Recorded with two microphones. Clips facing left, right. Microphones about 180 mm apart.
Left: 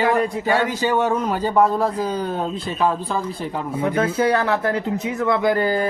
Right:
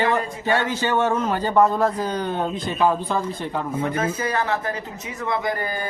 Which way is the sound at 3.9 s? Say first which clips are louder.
Left 9 dB; 70° left (ahead or behind).